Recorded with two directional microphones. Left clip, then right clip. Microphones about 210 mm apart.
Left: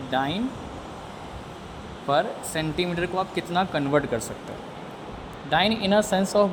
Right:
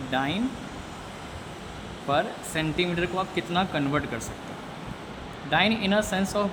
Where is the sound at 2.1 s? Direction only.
20° left (ahead or behind).